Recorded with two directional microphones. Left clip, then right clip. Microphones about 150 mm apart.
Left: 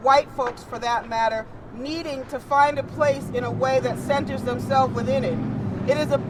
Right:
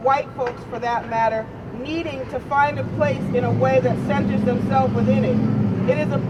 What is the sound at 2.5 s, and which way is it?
Speech, 30° left (ahead or behind).